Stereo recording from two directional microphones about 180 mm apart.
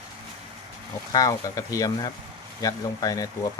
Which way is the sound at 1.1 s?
20° left (ahead or behind).